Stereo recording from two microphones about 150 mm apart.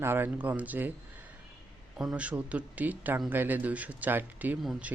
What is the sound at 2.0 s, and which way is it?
Speech, 10° right (ahead or behind).